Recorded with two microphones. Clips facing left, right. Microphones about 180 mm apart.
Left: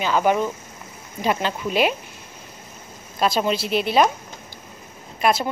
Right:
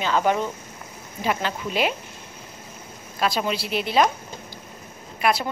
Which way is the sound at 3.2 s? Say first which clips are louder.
Left 3 dB; 30° left (ahead or behind).